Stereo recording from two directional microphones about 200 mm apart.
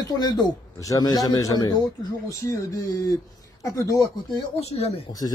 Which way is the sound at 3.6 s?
15° left (ahead or behind).